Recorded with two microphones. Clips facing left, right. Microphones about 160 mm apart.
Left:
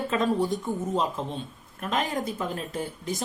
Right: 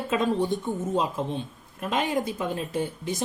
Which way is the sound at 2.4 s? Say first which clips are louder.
Right 3 dB; 20° right (ahead or behind).